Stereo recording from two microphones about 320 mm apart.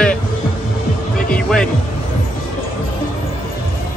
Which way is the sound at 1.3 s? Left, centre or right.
Centre.